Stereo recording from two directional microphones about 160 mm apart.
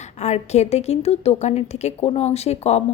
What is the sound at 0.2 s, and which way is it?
A woman's voice, 45° left (ahead or behind).